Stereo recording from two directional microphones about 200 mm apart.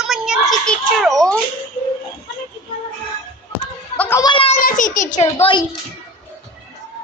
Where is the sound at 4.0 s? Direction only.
15° left (ahead or behind).